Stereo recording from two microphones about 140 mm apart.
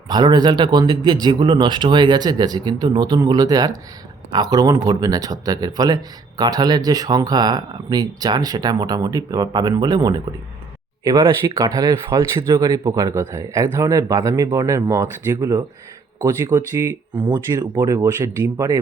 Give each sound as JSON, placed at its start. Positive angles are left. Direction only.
{"t": 0.1, "sound": "speech", "side_deg": -30}
{"t": 17.2, "sound": "speech", "side_deg": -30}